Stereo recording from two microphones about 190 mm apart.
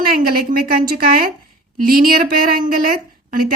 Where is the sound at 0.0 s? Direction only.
50° right (ahead or behind).